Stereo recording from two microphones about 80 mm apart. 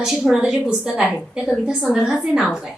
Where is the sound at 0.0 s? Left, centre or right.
Centre.